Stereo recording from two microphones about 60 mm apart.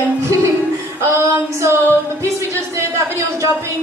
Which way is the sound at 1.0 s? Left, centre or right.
Right.